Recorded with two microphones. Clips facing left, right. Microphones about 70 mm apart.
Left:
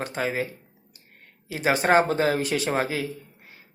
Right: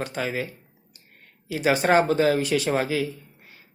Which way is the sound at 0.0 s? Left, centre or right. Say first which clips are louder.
Left 1 dB; left.